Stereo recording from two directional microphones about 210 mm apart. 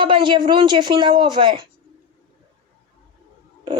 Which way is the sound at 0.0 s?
20° right (ahead or behind).